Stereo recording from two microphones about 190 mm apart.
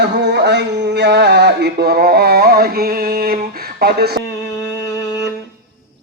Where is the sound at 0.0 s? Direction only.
60° right (ahead or behind).